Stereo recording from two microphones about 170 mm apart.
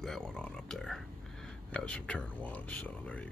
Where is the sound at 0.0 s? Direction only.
5° left (ahead or behind).